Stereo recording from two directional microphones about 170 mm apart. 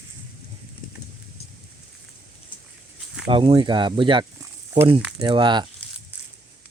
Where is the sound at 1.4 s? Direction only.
40° left (ahead or behind).